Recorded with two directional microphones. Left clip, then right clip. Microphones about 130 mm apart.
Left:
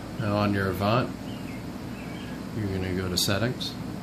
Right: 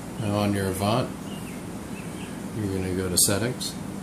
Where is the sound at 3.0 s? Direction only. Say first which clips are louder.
Right 1 dB; 20° left (ahead or behind).